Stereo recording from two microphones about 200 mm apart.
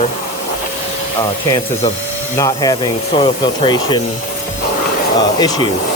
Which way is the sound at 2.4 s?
20° left (ahead or behind).